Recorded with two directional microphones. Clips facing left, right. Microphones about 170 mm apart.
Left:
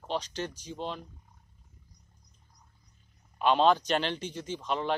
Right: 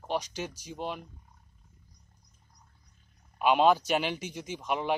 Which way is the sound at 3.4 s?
10° right (ahead or behind).